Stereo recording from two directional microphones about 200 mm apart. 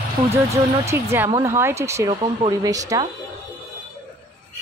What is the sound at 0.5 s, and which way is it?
A woman's voice, 15° right (ahead or behind).